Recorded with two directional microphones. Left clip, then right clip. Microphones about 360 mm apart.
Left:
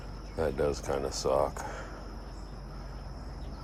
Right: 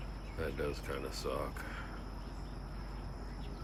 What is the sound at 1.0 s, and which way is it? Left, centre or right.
Speech, centre.